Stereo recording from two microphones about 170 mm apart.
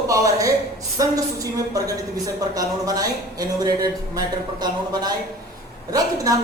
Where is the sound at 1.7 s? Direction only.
20° right (ahead or behind).